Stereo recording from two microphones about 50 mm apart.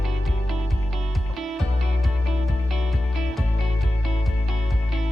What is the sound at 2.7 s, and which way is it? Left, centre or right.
Music, centre.